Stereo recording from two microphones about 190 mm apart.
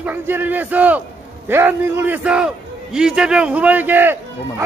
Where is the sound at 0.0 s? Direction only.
10° right (ahead or behind).